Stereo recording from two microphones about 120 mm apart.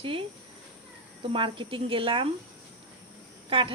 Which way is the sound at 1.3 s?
45° right (ahead or behind).